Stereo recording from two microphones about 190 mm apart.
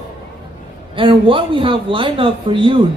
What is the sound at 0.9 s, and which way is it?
A man's voice, 25° right (ahead or behind).